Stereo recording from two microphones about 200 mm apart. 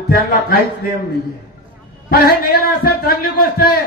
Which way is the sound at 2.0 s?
50° left (ahead or behind).